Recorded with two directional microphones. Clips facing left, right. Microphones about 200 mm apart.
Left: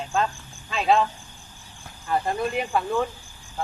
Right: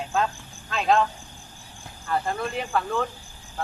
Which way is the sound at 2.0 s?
15° left (ahead or behind).